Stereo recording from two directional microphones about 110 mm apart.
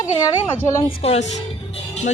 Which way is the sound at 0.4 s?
20° left (ahead or behind).